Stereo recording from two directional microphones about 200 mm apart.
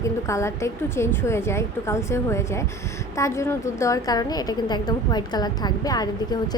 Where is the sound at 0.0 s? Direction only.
15° left (ahead or behind).